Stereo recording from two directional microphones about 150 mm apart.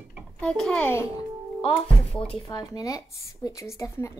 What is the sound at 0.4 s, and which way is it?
Speech, 5° left (ahead or behind).